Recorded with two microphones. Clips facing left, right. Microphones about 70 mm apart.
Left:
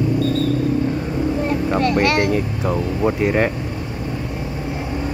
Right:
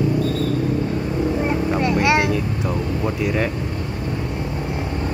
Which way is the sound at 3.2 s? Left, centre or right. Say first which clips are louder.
Left 3 dB; left.